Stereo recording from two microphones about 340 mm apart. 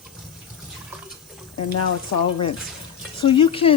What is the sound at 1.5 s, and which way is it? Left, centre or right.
Speech, left.